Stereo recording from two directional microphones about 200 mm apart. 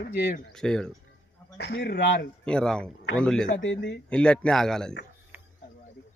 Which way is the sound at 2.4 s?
5° left (ahead or behind).